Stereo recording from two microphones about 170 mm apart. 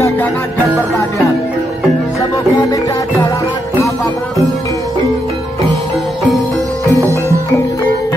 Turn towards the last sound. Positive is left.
turn(degrees=-15)  # may be behind; listen again after turning